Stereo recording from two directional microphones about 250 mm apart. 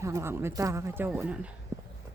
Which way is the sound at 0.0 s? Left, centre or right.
Centre.